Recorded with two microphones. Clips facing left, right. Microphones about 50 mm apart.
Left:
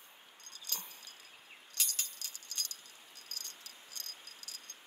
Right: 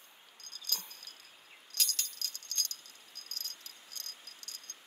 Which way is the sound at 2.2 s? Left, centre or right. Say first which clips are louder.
Right 4 dB; centre.